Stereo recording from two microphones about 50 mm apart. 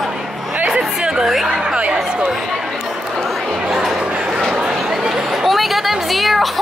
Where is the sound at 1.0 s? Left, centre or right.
Centre.